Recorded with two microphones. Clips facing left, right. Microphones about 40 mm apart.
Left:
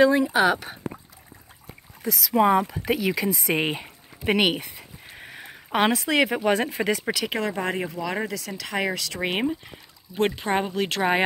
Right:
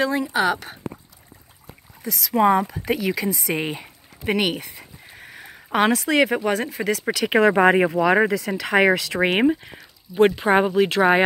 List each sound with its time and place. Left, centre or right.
0.0 s speech: centre
2.0 s speech: centre
3.4 s a sound: centre
6.5 s speech: left
7.5 s speech: right
8.3 s speech: right
8.7 s speech: right
9.0 s speech: right
10.1 s speech: centre